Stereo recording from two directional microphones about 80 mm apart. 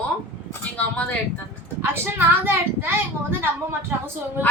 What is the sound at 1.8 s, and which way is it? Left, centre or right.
A woman's voice, right.